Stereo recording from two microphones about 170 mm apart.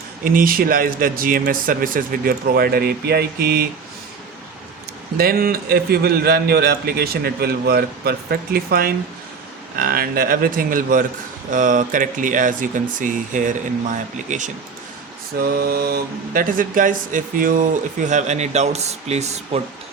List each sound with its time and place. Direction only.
0.3 s a man's voice: 55° right (ahead or behind)
5.1 s a man's voice: 60° right (ahead or behind)
15.4 s a man's voice: 65° right (ahead or behind); by 19.6 s 40° right (ahead or behind)